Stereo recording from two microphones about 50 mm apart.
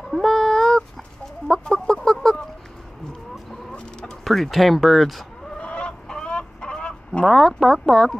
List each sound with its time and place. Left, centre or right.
0.1 s a sound: centre
1.5 s fowl: centre
3.7 s chicken: centre
4.2 s speech: centre
5.6 s chicken: left
7.2 s speech: centre